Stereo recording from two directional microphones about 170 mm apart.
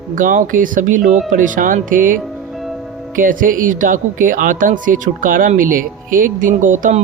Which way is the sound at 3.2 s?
55° right (ahead or behind).